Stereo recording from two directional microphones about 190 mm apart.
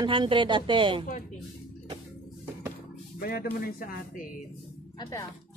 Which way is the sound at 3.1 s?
55° left (ahead or behind).